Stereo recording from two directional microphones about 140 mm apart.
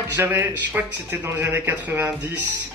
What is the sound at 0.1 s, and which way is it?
A man's voice, 15° right (ahead or behind).